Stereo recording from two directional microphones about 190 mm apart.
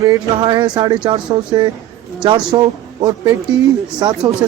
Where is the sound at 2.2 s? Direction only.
25° right (ahead or behind).